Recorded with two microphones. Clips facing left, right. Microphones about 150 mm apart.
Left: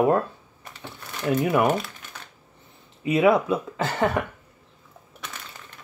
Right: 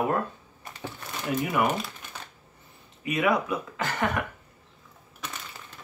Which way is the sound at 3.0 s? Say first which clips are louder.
Left 6 dB; 30° left (ahead or behind).